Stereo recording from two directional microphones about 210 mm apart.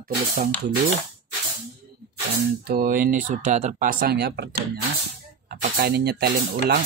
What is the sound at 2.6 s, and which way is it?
Speech, 40° right (ahead or behind).